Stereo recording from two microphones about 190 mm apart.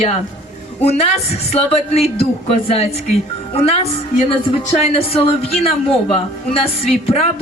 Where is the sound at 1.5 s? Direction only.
35° left (ahead or behind).